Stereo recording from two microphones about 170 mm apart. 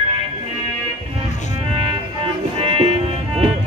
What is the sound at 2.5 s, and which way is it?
Music, 35° right (ahead or behind).